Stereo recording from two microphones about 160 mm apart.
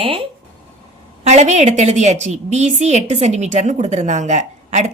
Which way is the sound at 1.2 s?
45° right (ahead or behind).